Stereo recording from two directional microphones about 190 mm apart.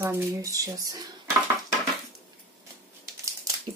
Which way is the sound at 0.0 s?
15° right (ahead or behind).